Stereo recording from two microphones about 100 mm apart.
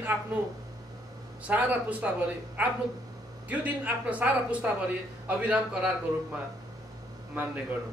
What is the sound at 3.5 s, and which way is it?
Speech, 15° right (ahead or behind).